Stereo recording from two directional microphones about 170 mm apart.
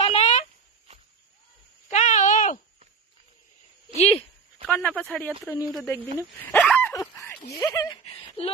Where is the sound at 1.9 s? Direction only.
45° left (ahead or behind).